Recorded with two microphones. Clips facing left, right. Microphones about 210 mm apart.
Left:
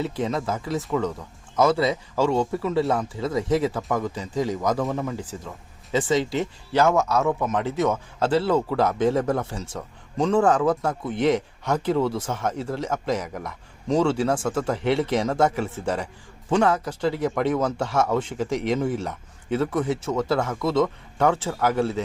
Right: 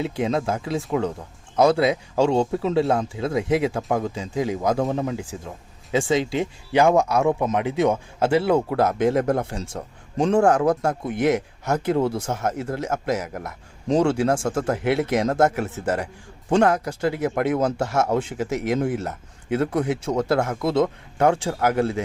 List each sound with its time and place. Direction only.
0.0 s speech: 15° right (ahead or behind)
13.8 s speech: 15° right (ahead or behind)
16.5 s speech: 20° right (ahead or behind)
17.0 s speech: 10° right (ahead or behind)